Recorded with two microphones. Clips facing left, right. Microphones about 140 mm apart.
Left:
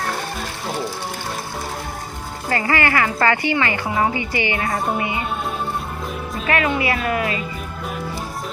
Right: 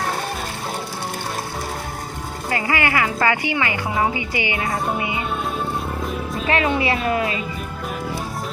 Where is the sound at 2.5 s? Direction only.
15° right (ahead or behind).